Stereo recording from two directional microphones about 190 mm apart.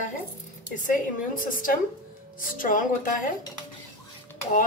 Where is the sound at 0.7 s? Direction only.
45° left (ahead or behind).